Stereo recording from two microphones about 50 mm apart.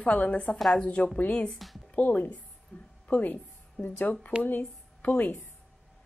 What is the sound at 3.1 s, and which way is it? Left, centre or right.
A woman's voice, left.